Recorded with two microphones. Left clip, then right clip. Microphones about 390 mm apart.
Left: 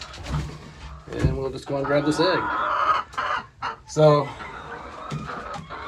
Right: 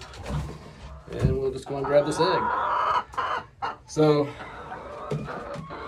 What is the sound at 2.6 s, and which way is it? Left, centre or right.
Chicken, right.